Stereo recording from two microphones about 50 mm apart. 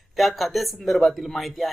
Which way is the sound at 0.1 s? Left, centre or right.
Centre.